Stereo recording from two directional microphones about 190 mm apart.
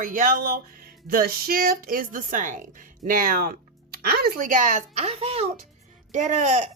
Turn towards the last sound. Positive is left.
turn(degrees=-40)  # may be behind; listen again after turning